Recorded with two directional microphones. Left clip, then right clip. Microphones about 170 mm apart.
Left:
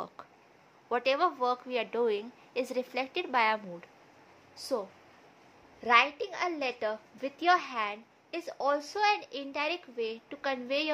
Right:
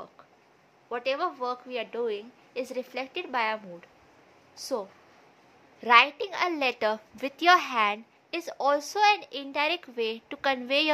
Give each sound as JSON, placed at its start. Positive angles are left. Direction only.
{"t": 0.8, "sound": "a woman's voice", "side_deg": 15}
{"t": 4.6, "sound": "speech", "side_deg": -5}
{"t": 5.8, "sound": "a woman's voice", "side_deg": -20}